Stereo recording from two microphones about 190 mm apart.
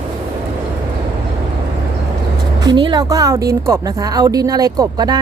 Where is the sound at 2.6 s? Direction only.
25° right (ahead or behind).